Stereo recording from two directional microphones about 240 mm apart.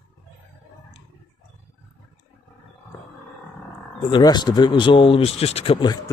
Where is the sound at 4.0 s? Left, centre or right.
Centre.